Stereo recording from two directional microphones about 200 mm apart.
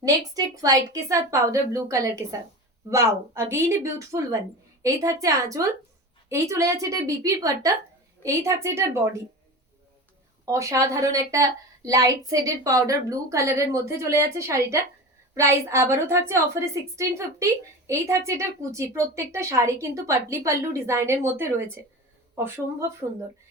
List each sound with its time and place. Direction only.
0.3 s a woman's voice: 15° right (ahead or behind)
10.4 s a woman's voice: 15° right (ahead or behind)